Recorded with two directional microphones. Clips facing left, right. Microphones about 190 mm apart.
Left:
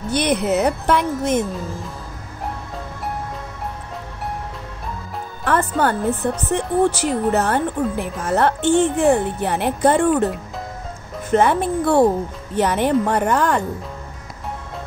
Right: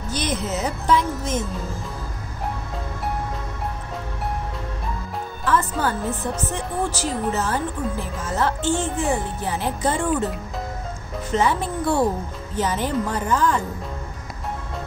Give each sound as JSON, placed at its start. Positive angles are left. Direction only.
{"t": 0.1, "sound": "speech", "side_deg": 65}
{"t": 5.4, "sound": "speech", "side_deg": 60}
{"t": 11.3, "sound": "speech", "side_deg": 60}